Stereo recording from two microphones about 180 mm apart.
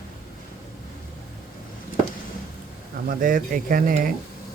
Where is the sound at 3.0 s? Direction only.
50° right (ahead or behind).